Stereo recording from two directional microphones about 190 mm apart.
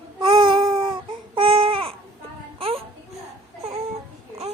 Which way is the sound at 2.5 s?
30° right (ahead or behind).